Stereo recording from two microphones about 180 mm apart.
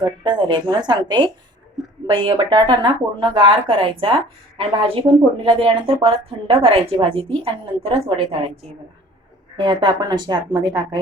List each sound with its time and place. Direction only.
0.0 s a woman's voice: 25° right (ahead or behind)
9.6 s speech: 25° right (ahead or behind)